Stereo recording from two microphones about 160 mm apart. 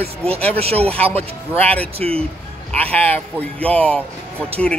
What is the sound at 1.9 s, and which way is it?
Speech, 35° right (ahead or behind).